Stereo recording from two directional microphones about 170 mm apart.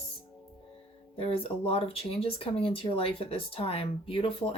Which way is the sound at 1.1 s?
35° left (ahead or behind).